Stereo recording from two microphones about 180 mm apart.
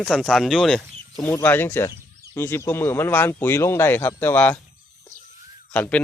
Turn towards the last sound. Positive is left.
turn(degrees=10)  # may be behind; listen again after turning